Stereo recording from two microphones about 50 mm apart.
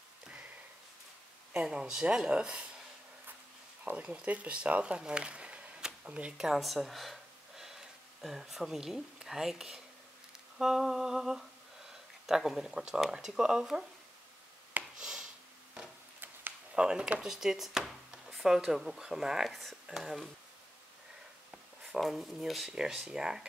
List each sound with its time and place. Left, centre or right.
1.5 s speech: right
4.0 s speech: right
6.6 s speech: centre
15.0 s a sound: centre
16.7 s speech: centre
21.5 s a sound: centre
22.0 s speech: centre
22.7 s speech: centre